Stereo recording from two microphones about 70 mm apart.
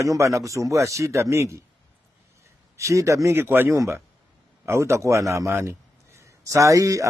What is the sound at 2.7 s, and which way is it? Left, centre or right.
Speech, right.